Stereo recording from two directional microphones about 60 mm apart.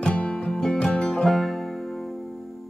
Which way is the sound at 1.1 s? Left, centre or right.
Centre.